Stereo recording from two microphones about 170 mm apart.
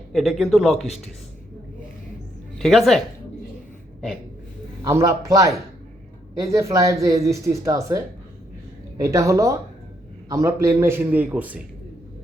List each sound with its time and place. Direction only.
0.1 s speech: centre (ahead or behind)
2.6 s speech: centre (ahead or behind)
4.8 s a man's voice: 15° right (ahead or behind)